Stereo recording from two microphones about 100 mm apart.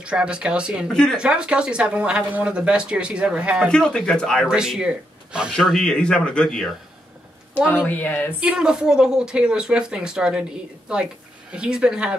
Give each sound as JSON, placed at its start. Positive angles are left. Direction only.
{"t": 0.0, "sound": "speech", "side_deg": -10}
{"t": 3.6, "sound": "speech", "side_deg": 10}
{"t": 4.5, "sound": "speech", "side_deg": -5}
{"t": 5.6, "sound": "speech", "side_deg": 5}
{"t": 7.5, "sound": "speech", "side_deg": 20}
{"t": 8.4, "sound": "speech", "side_deg": -10}